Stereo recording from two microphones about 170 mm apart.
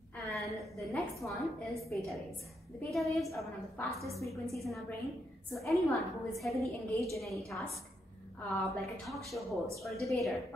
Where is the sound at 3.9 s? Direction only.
20° right (ahead or behind).